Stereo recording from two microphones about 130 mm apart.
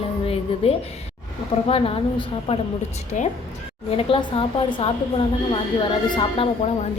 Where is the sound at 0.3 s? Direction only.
50° left (ahead or behind).